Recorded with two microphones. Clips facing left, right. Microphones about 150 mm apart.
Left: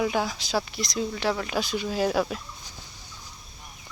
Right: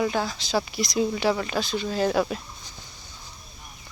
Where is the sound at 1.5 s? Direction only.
10° left (ahead or behind).